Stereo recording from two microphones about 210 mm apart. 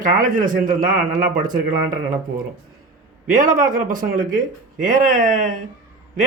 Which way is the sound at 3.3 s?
40° right (ahead or behind).